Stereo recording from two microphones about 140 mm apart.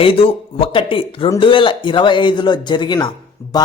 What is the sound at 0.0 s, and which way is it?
A man's voice, 40° left (ahead or behind).